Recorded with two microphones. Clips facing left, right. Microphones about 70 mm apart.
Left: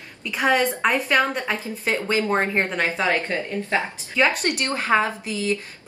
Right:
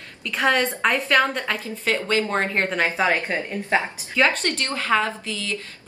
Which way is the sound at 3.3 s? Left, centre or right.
Right.